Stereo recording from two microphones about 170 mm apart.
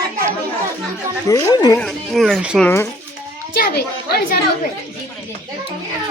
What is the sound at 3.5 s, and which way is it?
Speech, 65° left (ahead or behind).